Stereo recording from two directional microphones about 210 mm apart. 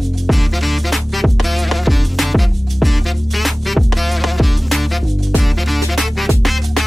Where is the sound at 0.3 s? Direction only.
Centre (ahead or behind).